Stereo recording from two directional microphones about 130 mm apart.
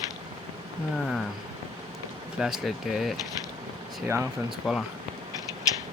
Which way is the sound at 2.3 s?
5° right (ahead or behind).